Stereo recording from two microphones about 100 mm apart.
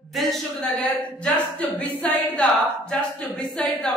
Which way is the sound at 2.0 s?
10° left (ahead or behind).